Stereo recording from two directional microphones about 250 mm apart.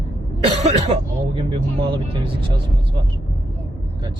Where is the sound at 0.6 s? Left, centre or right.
Right.